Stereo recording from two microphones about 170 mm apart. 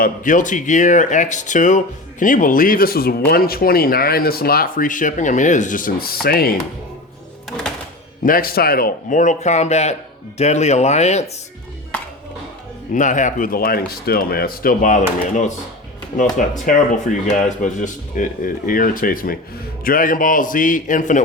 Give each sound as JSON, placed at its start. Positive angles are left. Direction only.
{"t": 0.0, "sound": "speech", "side_deg": 50}
{"t": 8.2, "sound": "speech", "side_deg": 55}
{"t": 12.9, "sound": "speech", "side_deg": 50}
{"t": 16.6, "sound": "speech", "side_deg": 45}